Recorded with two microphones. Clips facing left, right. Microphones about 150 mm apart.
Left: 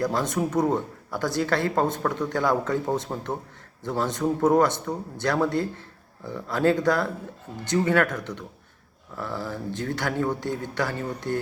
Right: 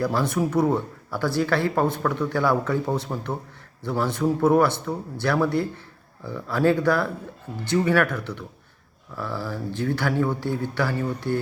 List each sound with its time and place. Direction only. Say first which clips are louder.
0.0 s speech: right 2 dB; 20° left (ahead or behind)